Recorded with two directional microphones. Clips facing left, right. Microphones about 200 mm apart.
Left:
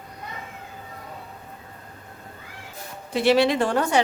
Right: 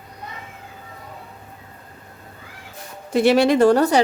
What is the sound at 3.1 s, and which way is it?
Speech, 50° right (ahead or behind).